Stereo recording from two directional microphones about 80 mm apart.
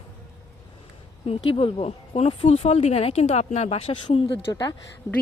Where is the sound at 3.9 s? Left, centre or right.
Left.